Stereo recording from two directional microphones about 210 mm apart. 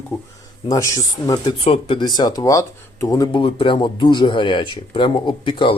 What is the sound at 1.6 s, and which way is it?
Speech, 30° left (ahead or behind).